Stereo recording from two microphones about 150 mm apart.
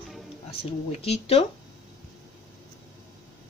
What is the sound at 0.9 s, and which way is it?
Speech, 45° left (ahead or behind).